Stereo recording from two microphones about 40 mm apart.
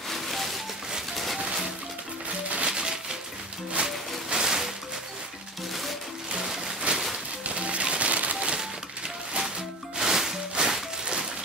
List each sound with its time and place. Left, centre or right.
0.1 s a sound: centre
1.1 s music: centre
2.2 s music: right
2.7 s a sound: centre
3.8 s music: centre
6.3 s music: centre
6.9 s a sound: right
7.4 s music: right
9.9 s music: centre